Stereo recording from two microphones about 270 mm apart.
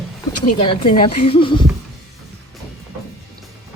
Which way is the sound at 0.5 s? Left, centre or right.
Centre.